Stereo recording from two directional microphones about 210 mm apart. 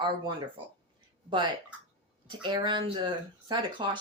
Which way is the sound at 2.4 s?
20° right (ahead or behind).